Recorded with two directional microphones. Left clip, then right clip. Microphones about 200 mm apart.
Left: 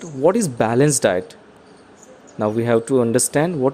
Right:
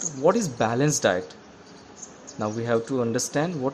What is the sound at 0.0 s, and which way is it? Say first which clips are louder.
Speech: left 4 dB; 35° left (ahead or behind).